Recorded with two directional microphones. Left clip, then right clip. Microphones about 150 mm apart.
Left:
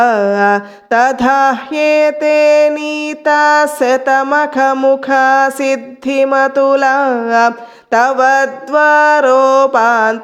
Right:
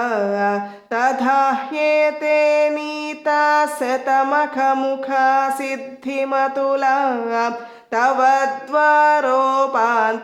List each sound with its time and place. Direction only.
0.0 s music: 35° left (ahead or behind)